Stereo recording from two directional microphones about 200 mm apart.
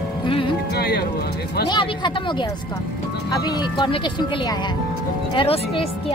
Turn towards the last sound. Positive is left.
turn(degrees=25)  # may be behind; listen again after turning